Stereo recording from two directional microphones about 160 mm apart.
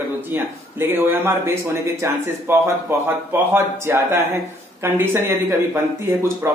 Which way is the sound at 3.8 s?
15° right (ahead or behind).